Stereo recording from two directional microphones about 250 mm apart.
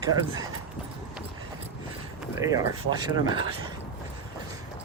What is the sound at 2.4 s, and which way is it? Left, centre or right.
Speech, centre.